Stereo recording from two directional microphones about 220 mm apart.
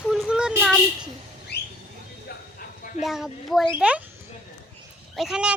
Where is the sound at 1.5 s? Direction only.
50° left (ahead or behind).